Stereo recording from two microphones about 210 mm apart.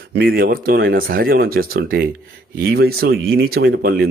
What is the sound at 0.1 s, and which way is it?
Speech, 50° right (ahead or behind).